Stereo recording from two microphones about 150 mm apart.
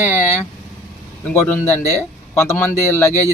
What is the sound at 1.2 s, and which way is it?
Speech, 10° left (ahead or behind).